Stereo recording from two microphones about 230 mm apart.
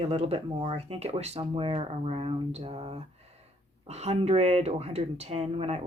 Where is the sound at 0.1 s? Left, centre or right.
Right.